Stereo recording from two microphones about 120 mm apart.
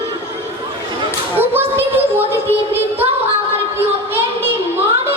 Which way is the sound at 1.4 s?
15° right (ahead or behind).